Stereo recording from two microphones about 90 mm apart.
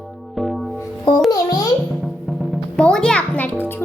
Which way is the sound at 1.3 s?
45° left (ahead or behind).